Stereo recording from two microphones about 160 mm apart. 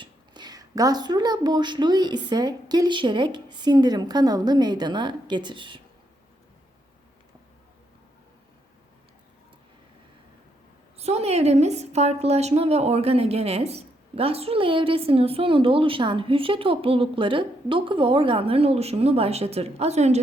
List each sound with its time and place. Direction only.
0.0 s a woman's voice: 25° right (ahead or behind)
10.9 s a woman's voice: 40° right (ahead or behind)